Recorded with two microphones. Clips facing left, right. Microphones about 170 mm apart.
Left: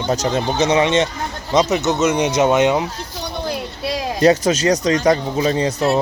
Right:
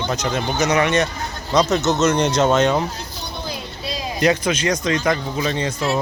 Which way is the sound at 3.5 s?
70° left (ahead or behind).